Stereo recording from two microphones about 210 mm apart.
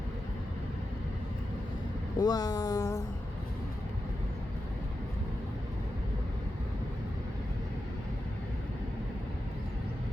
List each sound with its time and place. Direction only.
2.1 s speech: 20° left (ahead or behind)